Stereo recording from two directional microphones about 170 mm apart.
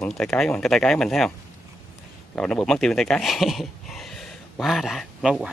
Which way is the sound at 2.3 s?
5° left (ahead or behind).